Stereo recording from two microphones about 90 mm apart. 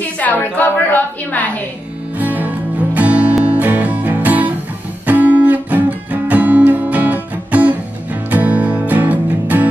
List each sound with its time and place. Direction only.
0.2 s a woman's voice: 20° left (ahead or behind)
2.1 s music: 20° right (ahead or behind)